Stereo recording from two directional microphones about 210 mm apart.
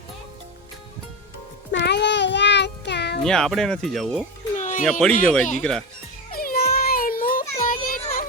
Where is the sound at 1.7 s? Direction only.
55° left (ahead or behind).